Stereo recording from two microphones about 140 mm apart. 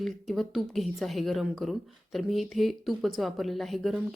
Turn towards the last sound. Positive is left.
turn(degrees=0)  # may be behind; listen again after turning